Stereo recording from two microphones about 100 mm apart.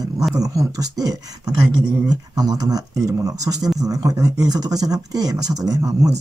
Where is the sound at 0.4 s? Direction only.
35° right (ahead or behind).